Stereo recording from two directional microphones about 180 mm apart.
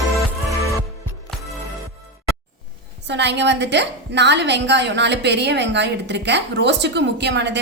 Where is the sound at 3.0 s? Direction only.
75° right (ahead or behind).